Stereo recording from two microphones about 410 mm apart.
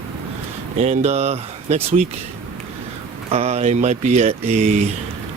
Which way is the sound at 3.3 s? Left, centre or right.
Centre.